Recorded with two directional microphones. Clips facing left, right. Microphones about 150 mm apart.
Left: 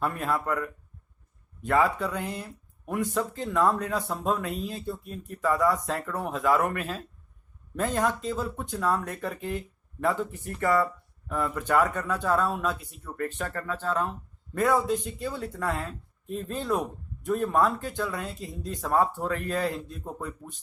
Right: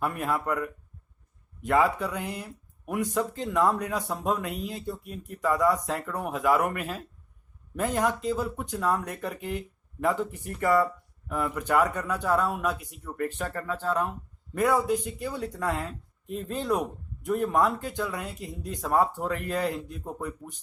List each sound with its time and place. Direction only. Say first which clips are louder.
0.0 s speech: even; 15° right (ahead or behind)